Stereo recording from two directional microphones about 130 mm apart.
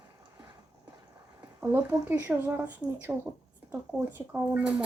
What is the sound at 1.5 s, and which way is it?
Speech, 15° right (ahead or behind).